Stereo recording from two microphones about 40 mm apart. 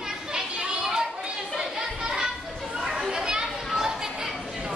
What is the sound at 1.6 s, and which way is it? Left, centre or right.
Chatter, centre.